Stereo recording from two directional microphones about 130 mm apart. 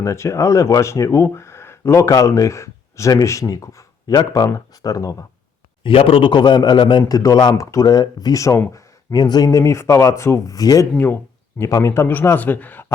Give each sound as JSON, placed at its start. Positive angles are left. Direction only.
{"t": 0.0, "sound": "speech", "side_deg": 25}
{"t": 5.8, "sound": "a man's voice", "side_deg": 45}
{"t": 10.9, "sound": "a man's voice", "side_deg": 15}